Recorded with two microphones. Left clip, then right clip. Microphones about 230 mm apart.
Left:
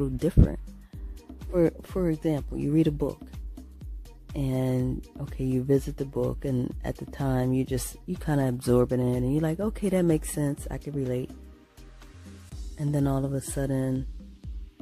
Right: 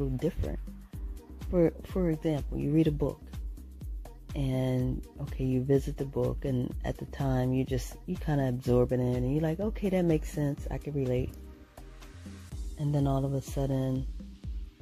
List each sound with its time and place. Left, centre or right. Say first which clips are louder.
0.0 s speech: left 6 dB; left
4.4 s speech: left 3 dB; left
6.8 s speech: left 2 dB; centre
12.7 s speech: left 3 dB; left